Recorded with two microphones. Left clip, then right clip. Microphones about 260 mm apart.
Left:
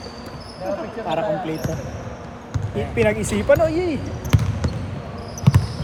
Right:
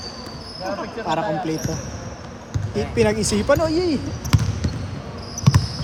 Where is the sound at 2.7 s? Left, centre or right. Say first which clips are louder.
Even; centre.